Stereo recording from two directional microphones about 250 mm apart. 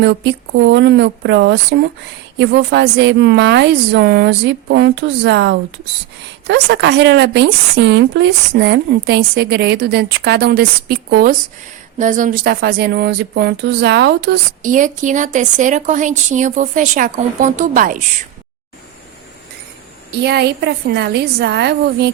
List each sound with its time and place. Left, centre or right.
0.0 s a woman's voice: right
20.1 s speech: right